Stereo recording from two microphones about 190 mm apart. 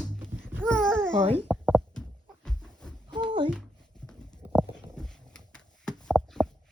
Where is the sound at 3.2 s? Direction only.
25° right (ahead or behind).